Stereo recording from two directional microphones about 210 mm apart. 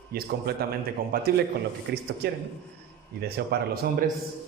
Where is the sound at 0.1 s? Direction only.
45° right (ahead or behind).